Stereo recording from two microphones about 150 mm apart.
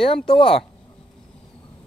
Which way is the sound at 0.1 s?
35° left (ahead or behind).